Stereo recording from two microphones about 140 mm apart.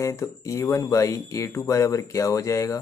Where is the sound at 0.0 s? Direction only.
20° left (ahead or behind).